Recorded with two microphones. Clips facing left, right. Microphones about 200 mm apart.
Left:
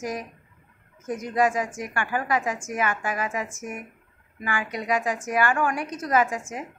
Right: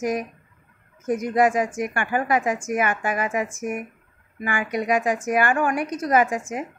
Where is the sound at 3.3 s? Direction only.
15° right (ahead or behind).